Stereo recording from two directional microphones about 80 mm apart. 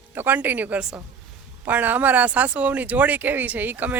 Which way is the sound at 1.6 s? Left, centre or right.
Right.